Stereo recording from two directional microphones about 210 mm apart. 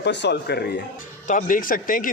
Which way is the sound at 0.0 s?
55° left (ahead or behind).